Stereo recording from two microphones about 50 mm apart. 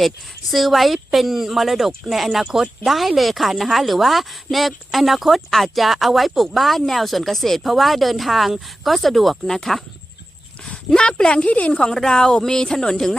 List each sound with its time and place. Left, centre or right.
0.5 s speech: centre
10.8 s a woman's voice: centre
11.7 s a woman's voice: centre